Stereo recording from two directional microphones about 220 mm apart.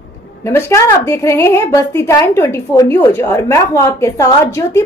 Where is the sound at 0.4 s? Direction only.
10° left (ahead or behind).